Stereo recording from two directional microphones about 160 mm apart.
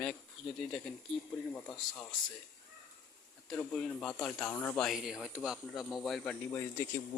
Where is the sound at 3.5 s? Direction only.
5° left (ahead or behind).